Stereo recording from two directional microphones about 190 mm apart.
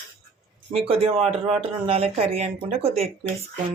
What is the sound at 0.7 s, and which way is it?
Speech, 30° right (ahead or behind).